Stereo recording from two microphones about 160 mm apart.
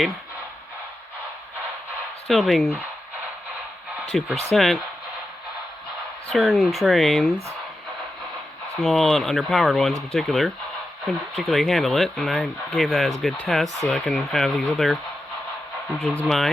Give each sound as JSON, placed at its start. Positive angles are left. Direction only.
{"t": 2.2, "sound": "speech", "side_deg": 0}
{"t": 4.1, "sound": "speech", "side_deg": 0}
{"t": 6.2, "sound": "speech", "side_deg": 0}
{"t": 8.8, "sound": "speech", "side_deg": 0}